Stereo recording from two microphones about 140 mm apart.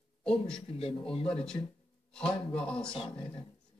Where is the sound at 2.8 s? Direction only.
40° left (ahead or behind).